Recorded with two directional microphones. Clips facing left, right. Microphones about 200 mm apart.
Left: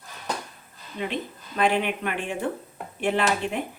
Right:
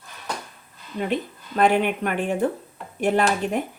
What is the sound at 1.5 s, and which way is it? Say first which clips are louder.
A woman's voice: right 4 dB; 45° right (ahead or behind).